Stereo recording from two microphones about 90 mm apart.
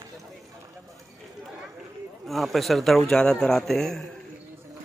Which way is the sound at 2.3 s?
Centre (ahead or behind).